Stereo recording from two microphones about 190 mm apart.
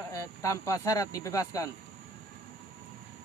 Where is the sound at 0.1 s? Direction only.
15° left (ahead or behind).